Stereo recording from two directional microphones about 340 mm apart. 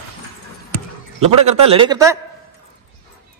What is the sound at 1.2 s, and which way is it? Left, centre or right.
Speech, centre.